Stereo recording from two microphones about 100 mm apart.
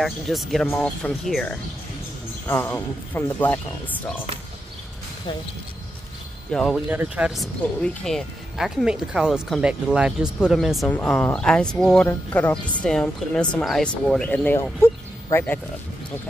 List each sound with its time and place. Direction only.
0.0 s speech: centre (ahead or behind)
0.7 s speech: 15° left (ahead or behind)
2.4 s speech: 25° left (ahead or behind)
6.5 s speech: 5° left (ahead or behind)
6.9 s speech: 15° right (ahead or behind)
7.8 s speech: 10° left (ahead or behind)
8.5 s speech: 5° right (ahead or behind)
10.9 s speech: 15° left (ahead or behind)
12.1 s speech: 20° left (ahead or behind)
14.8 s speech: 25° left (ahead or behind)